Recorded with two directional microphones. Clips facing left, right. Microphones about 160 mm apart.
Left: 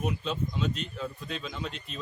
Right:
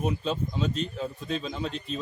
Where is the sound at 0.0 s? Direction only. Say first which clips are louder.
Right 3 dB; 35° right (ahead or behind).